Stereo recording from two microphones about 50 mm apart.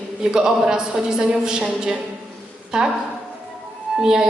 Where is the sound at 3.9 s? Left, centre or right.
Centre.